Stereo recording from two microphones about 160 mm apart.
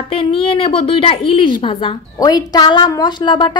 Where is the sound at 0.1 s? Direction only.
35° left (ahead or behind).